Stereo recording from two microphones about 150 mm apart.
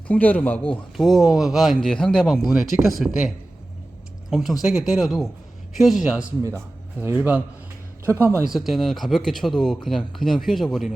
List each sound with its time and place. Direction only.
0.1 s a man's voice: 10° left (ahead or behind)
0.7 s speech: centre (ahead or behind); by 8.4 s 15° right (ahead or behind)
8.4 s speech: centre (ahead or behind)